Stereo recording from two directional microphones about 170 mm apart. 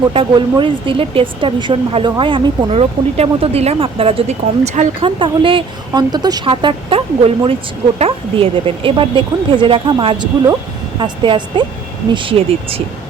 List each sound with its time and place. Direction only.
0.1 s speech: 30° right (ahead or behind)